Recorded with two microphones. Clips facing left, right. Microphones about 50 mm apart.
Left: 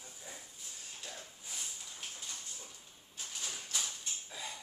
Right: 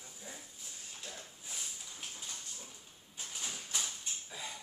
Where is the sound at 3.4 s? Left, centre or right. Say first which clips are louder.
Even; right.